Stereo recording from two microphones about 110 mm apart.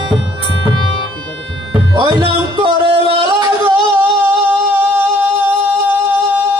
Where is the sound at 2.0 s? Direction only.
40° right (ahead or behind).